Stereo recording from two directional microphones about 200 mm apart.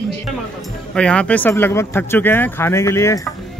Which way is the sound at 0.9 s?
5° left (ahead or behind).